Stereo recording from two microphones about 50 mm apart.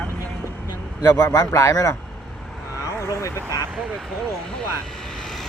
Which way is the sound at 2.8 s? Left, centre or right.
Left.